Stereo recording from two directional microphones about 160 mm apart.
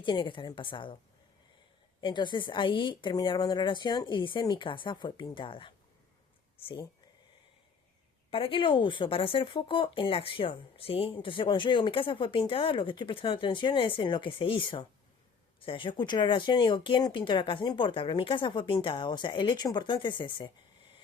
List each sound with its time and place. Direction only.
0.0 s speech: 30° left (ahead or behind)
2.0 s speech: 30° left (ahead or behind)
8.3 s speech: 35° left (ahead or behind)